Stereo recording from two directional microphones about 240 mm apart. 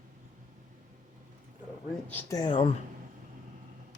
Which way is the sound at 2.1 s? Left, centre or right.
Centre.